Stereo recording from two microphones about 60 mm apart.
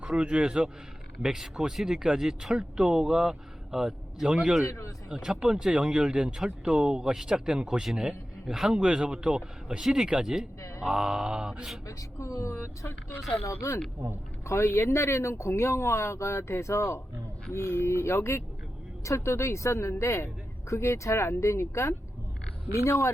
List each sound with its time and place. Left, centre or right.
0.0 s speech: centre
4.6 s speech: left
5.0 s speech: centre
11.9 s speech: left